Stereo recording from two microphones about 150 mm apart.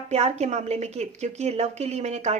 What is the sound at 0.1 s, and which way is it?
A woman's voice, 50° right (ahead or behind).